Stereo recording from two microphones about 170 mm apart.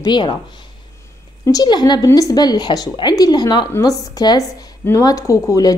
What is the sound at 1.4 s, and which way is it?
Speech, 25° left (ahead or behind).